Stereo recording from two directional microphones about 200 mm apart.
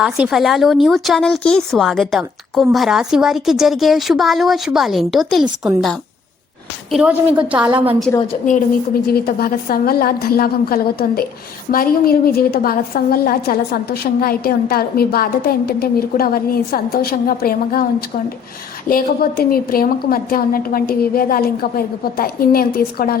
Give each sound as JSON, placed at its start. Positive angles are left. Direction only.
{"t": 0.0, "sound": "a woman's voice", "side_deg": -5}
{"t": 9.2, "sound": "a woman's voice", "side_deg": 45}
{"t": 18.9, "sound": "a woman's voice", "side_deg": 45}